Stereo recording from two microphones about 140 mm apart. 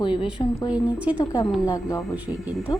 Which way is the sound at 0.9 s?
10° right (ahead or behind).